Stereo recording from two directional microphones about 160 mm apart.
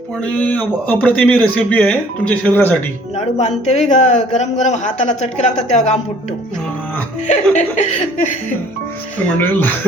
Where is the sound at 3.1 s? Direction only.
45° left (ahead or behind).